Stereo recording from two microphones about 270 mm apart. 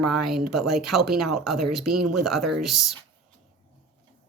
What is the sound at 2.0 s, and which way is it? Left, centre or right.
Speech, right.